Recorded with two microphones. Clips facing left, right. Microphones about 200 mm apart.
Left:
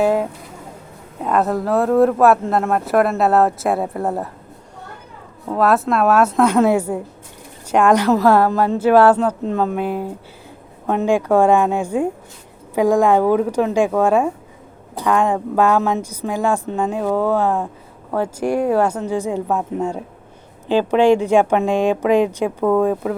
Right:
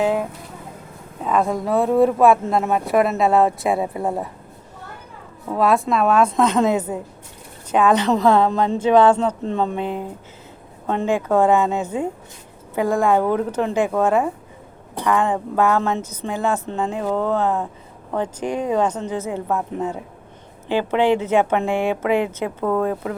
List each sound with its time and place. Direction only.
0.0 s speech: 10° left (ahead or behind)
5.5 s a woman's voice: centre (ahead or behind)
9.8 s speech: 20° right (ahead or behind)
10.8 s a woman's voice: 10° left (ahead or behind)
21.0 s a woman's voice: 15° left (ahead or behind)